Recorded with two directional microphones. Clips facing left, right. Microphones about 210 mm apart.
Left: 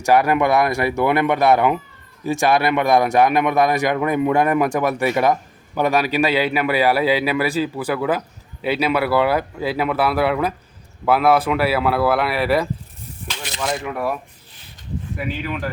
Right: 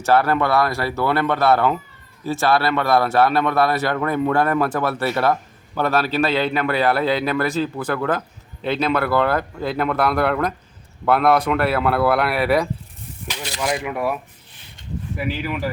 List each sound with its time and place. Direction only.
0.0 s a man's voice: 15° left (ahead or behind); by 14.2 s 5° right (ahead or behind)
15.2 s speech: 5° right (ahead or behind)